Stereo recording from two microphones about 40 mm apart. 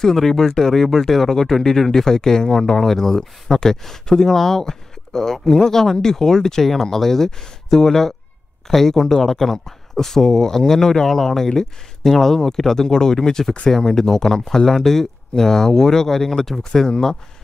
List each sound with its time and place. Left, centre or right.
0.0 s speech: centre